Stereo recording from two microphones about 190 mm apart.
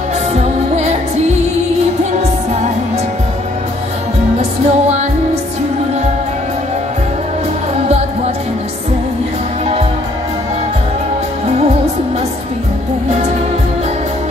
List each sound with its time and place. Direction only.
0.3 s music: 35° right (ahead or behind)
4.4 s music: 35° right (ahead or behind)